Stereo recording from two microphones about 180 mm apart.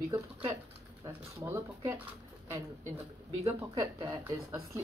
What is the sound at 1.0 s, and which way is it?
Speech, 15° right (ahead or behind).